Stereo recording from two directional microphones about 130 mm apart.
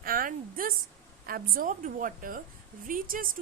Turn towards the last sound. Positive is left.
turn(degrees=-90)